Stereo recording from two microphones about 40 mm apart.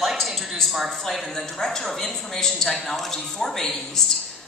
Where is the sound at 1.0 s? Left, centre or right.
Centre.